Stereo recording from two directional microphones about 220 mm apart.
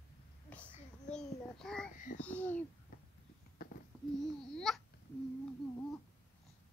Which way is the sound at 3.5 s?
40° left (ahead or behind).